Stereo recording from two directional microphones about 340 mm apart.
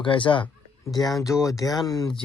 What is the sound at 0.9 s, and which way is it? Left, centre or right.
Speech, centre.